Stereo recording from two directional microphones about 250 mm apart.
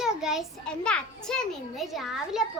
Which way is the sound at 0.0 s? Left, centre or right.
Centre.